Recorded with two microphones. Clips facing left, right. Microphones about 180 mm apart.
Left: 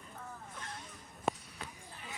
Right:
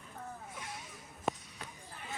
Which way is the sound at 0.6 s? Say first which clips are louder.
Right 1 dB; 10° right (ahead or behind).